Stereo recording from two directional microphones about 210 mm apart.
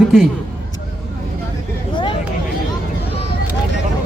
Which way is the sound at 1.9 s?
20° left (ahead or behind).